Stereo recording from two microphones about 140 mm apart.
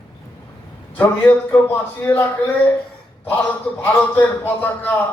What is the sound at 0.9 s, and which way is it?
A man's voice, 10° left (ahead or behind).